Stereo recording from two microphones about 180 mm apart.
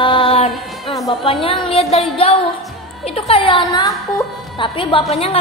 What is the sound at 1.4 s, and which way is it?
Speech, 35° left (ahead or behind).